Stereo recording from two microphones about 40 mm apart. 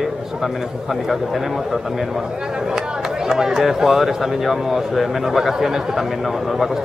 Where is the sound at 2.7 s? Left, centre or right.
Centre.